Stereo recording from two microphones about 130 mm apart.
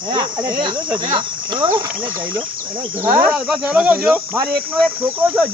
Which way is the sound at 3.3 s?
5° right (ahead or behind).